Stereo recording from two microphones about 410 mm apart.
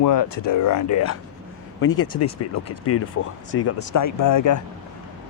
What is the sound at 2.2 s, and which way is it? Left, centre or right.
Speech, left.